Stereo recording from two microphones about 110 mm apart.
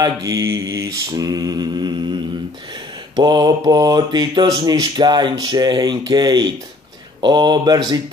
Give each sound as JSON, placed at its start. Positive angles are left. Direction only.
{"t": 0.0, "sound": "mantra", "side_deg": -30}
{"t": 3.2, "sound": "mantra", "side_deg": -40}